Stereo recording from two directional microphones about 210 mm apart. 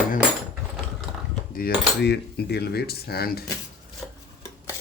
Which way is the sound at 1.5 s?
50° left (ahead or behind).